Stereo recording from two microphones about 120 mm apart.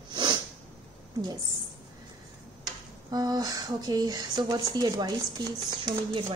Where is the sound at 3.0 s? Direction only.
35° right (ahead or behind).